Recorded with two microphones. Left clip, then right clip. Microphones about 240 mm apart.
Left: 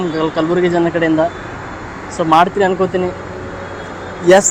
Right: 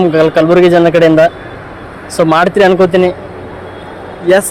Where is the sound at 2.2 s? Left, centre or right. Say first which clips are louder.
Right 3 dB; right.